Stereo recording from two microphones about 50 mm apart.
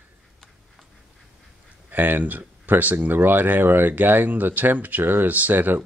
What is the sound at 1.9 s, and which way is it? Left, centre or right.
Speech, right.